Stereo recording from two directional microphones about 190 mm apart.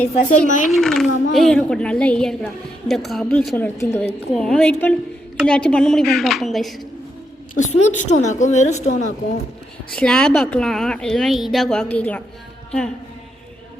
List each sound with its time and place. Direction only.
0.1 s a woman's voice: 40° left (ahead or behind)
0.7 s a child's voice: centre (ahead or behind)
7.5 s a woman's voice: 40° left (ahead or behind)
9.9 s a child's voice: 5° left (ahead or behind)